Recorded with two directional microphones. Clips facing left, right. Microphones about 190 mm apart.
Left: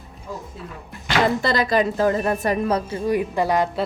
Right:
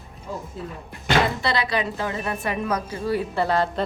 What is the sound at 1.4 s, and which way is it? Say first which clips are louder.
A woman's voice: left 5 dB; 45° left (ahead or behind).